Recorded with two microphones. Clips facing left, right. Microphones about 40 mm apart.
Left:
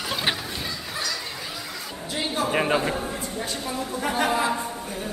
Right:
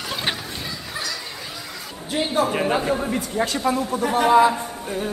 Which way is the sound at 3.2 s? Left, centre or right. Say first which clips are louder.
Right 7 dB; right.